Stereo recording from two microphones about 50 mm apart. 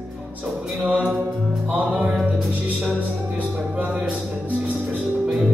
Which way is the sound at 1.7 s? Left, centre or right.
Right.